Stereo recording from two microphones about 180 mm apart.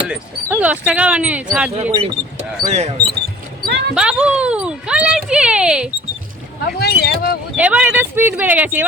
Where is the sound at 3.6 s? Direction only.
65° right (ahead or behind).